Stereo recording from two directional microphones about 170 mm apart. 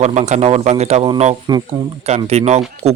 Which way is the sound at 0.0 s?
40° right (ahead or behind).